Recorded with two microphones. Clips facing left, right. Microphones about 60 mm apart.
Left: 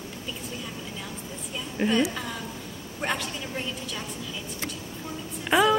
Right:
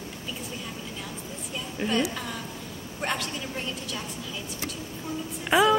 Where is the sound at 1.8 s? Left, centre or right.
Left.